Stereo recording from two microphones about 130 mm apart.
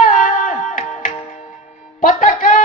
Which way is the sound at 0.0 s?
90° left.